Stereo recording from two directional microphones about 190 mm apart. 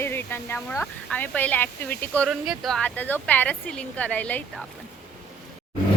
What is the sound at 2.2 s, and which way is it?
Speech, centre (ahead or behind).